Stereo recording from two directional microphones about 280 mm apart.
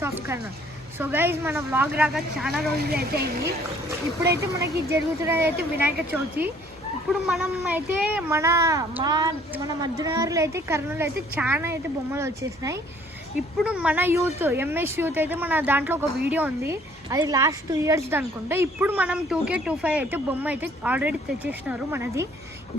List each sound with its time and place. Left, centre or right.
0.0 s a woman's voice: centre
2.9 s speech: right
4.9 s a woman's voice: centre